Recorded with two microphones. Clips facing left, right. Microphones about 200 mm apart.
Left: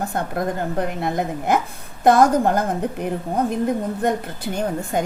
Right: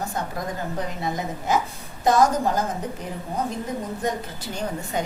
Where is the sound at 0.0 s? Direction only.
55° left (ahead or behind).